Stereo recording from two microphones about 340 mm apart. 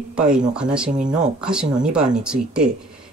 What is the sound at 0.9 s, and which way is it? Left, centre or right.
Speech, right.